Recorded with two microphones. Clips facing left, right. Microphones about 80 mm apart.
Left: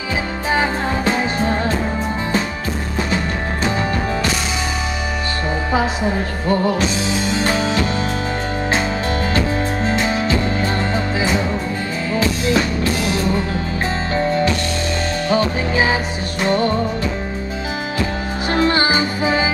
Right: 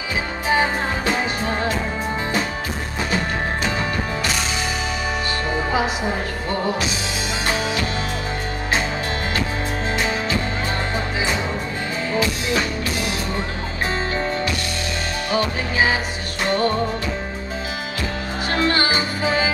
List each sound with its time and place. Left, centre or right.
16.4 s music: left
18.5 s music: left